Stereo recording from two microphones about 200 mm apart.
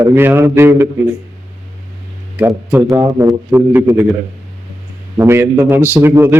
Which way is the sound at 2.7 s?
10° right (ahead or behind).